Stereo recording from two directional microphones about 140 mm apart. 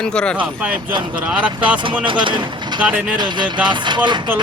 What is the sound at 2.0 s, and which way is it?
Speech, 35° right (ahead or behind).